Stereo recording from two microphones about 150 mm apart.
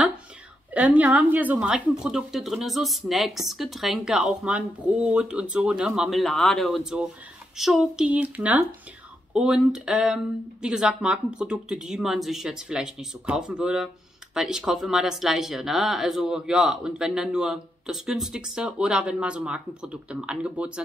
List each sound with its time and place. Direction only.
0.7 s speech: 10° right (ahead or behind)